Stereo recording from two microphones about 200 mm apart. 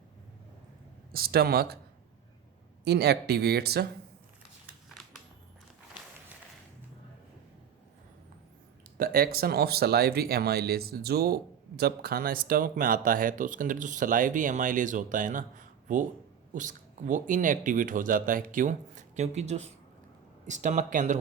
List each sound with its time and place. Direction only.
1.1 s speech: 50° right (ahead or behind)
2.8 s speech: 55° right (ahead or behind)
9.0 s speech: 50° right (ahead or behind)